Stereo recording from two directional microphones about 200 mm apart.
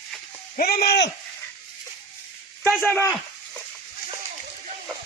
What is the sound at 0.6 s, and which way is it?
Speech, 50° left (ahead or behind).